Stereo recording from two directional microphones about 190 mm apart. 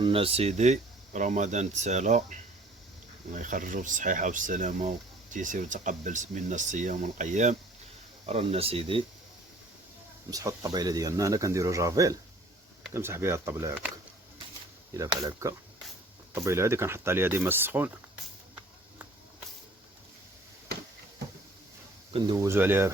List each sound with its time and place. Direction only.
0.0 s speech: 30° right (ahead or behind)
10.2 s speech: 20° right (ahead or behind)
15.2 s speech: 15° right (ahead or behind)
22.1 s speech: 20° right (ahead or behind)